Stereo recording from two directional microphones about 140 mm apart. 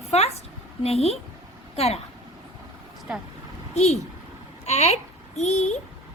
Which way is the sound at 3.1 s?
10° right (ahead or behind).